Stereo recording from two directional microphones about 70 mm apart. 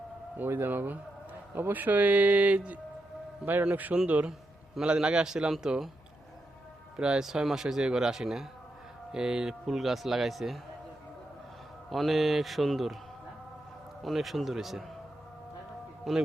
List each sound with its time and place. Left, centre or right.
0.3 s a man's voice: right; by 5.9 s centre
6.9 s speech: centre
11.9 s speech: centre
14.0 s speech: centre
16.1 s speech: centre